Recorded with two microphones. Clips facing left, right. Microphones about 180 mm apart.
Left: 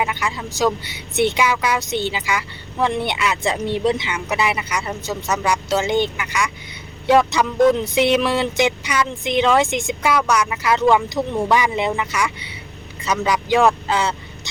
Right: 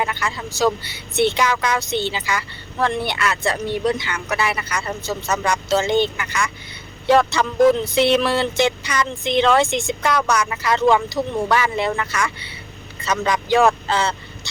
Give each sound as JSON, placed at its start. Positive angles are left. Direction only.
{"t": 0.0, "sound": "a woman's voice", "side_deg": 15}